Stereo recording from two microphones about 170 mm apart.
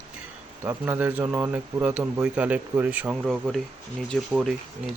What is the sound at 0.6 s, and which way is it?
Speech, 10° right (ahead or behind).